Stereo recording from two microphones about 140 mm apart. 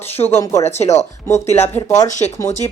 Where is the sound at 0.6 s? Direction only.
50° left (ahead or behind).